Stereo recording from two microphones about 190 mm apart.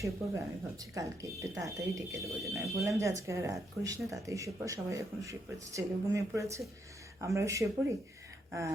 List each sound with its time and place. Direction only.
0.0 s speech: 15° right (ahead or behind)
2.2 s speech: centre (ahead or behind)
2.8 s speech: 15° right (ahead or behind)